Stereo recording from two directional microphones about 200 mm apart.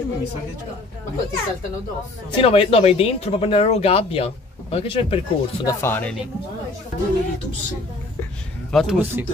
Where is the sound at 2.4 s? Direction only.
30° left (ahead or behind).